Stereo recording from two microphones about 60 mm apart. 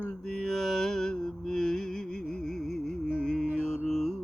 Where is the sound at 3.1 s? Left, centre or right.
Centre.